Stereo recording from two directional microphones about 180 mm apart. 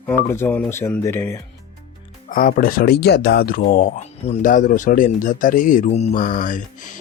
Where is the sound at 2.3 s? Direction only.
50° left (ahead or behind).